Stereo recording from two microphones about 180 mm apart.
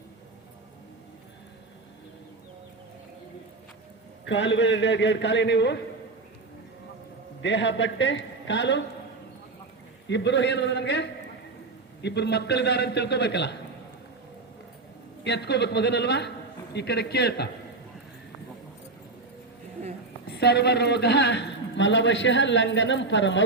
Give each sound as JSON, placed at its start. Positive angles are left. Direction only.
{"t": 4.3, "sound": "a man's voice", "side_deg": 90}
{"t": 7.4, "sound": "a man's voice", "side_deg": 85}
{"t": 10.1, "sound": "a man's voice", "side_deg": 75}
{"t": 15.2, "sound": "a man's voice", "side_deg": 70}
{"t": 20.2, "sound": "a woman's voice", "side_deg": 65}